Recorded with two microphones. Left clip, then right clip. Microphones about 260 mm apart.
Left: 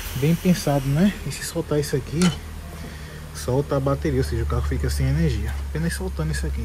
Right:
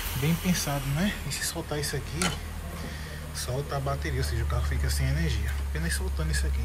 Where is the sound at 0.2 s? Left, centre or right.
Centre.